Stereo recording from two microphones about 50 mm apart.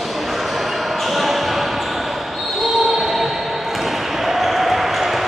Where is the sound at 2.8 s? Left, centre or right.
Centre.